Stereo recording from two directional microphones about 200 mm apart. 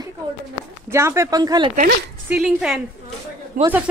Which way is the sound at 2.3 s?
Centre (ahead or behind).